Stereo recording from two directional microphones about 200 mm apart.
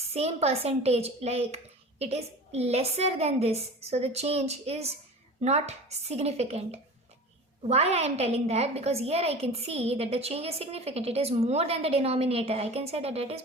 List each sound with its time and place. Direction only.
0.1 s a woman's voice: 30° right (ahead or behind)